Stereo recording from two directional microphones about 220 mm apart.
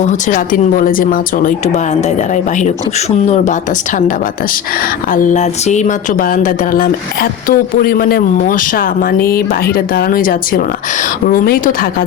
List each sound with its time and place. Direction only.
0.0 s speech: 35° left (ahead or behind)
5.1 s speech: 35° left (ahead or behind)